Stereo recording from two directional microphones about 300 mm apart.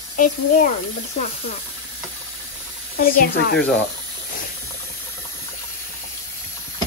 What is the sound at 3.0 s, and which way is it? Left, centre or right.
Speech, left.